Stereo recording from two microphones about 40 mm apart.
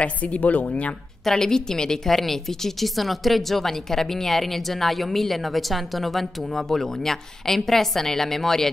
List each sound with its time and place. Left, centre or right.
0.0 s a woman's voice: left
1.2 s speech: centre